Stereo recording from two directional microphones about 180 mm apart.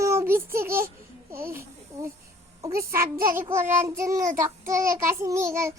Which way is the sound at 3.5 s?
15° right (ahead or behind).